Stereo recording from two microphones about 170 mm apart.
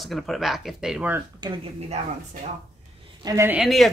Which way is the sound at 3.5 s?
Centre (ahead or behind).